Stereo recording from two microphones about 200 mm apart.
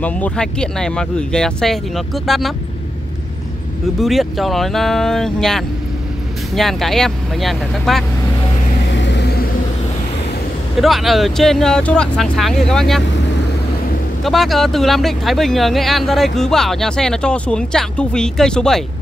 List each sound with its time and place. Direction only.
0.0 s speech: 5° left (ahead or behind)
4.0 s speech: centre (ahead or behind)
8.9 s vehicle: 60° left (ahead or behind)
10.8 s speech: centre (ahead or behind)
14.2 s speech: centre (ahead or behind)